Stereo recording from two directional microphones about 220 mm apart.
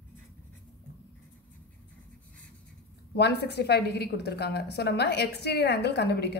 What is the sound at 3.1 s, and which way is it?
A woman's voice, 50° left (ahead or behind).